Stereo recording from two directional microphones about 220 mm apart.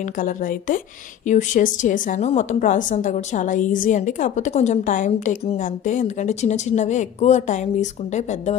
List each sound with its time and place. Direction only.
0.0 s a woman's voice: 40° left (ahead or behind)